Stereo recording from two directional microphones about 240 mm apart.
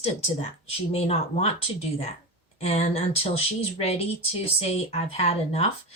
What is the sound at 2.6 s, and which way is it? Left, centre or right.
A woman's voice, left.